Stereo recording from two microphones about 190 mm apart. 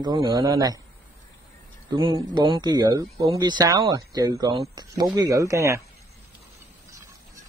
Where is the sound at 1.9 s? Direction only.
25° right (ahead or behind).